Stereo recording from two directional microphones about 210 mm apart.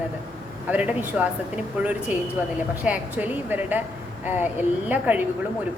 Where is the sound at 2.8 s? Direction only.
5° right (ahead or behind).